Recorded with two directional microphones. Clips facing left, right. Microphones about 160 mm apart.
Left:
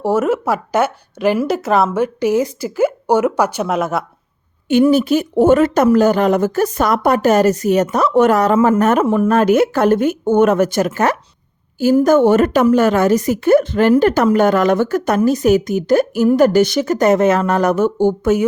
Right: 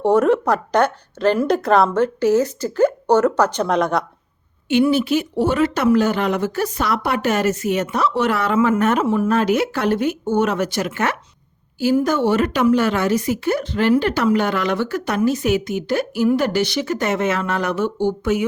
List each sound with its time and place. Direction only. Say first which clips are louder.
0.0 s a woman's voice: right 1 dB; 5° left (ahead or behind)
4.7 s a woman's voice: left 4 dB; 40° left (ahead or behind)